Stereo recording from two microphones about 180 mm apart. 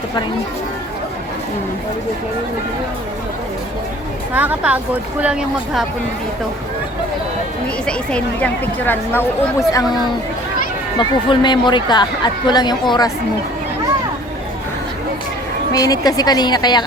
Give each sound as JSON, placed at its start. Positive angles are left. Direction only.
{"t": 4.4, "sound": "speech", "side_deg": -10}
{"t": 7.9, "sound": "speech", "side_deg": 5}
{"t": 10.9, "sound": "speech", "side_deg": 25}
{"t": 15.7, "sound": "speech", "side_deg": 20}